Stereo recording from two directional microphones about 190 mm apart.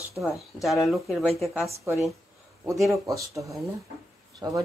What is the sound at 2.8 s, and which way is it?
Speech, 15° right (ahead or behind).